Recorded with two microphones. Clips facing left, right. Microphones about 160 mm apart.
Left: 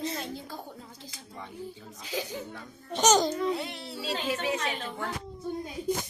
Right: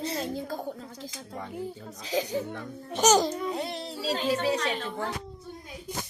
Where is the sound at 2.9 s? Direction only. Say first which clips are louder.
Right 1 dB; 5° right (ahead or behind).